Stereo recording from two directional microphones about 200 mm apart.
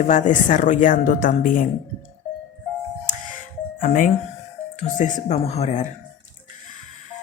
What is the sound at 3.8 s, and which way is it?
Speech, 40° left (ahead or behind).